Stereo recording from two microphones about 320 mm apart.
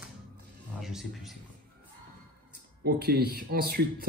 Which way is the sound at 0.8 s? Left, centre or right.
Centre.